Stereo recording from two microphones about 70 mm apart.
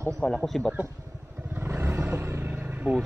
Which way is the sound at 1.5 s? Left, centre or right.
Right.